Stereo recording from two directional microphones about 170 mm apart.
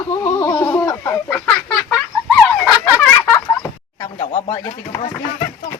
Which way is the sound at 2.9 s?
10° left (ahead or behind).